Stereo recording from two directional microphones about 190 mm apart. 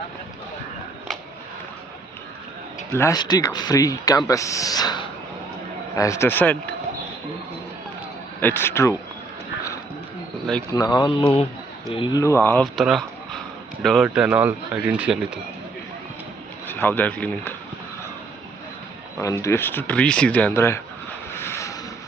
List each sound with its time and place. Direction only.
2.9 s speech: 15° left (ahead or behind)
8.4 s speech: 10° left (ahead or behind)
10.7 s speech: 20° left (ahead or behind)
12.8 s a sound: centre (ahead or behind)
13.8 s speech: centre (ahead or behind)
16.6 s speech: 10° left (ahead or behind)
19.2 s speech: 15° left (ahead or behind)
21.3 s vehicle: 15° left (ahead or behind)